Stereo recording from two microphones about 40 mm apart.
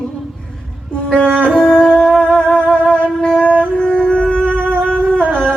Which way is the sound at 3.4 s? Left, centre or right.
Right.